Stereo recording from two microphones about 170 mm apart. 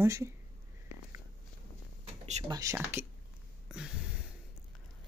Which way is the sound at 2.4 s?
20° right (ahead or behind).